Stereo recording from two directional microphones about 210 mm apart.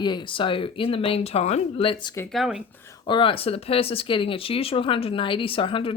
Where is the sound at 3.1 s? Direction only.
25° left (ahead or behind).